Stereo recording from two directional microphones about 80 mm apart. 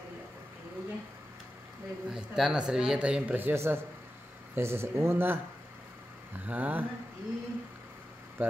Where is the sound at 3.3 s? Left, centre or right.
Right.